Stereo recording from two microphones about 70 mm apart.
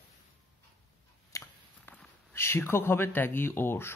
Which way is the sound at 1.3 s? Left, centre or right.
Left.